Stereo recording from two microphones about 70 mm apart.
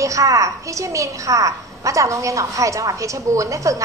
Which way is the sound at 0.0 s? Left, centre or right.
Right.